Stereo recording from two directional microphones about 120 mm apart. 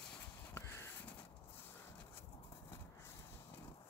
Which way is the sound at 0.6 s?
25° left (ahead or behind).